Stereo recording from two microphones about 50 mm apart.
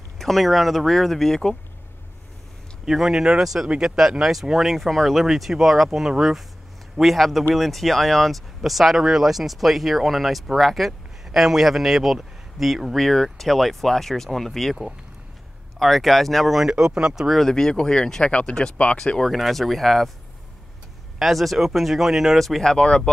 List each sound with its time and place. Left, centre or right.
0.2 s speech: centre
2.8 s a man's voice: centre
12.9 s speech: centre
15.8 s speech: centre
16.6 s speech: centre
17.4 s speech: centre
19.2 s speech: centre
21.2 s speech: centre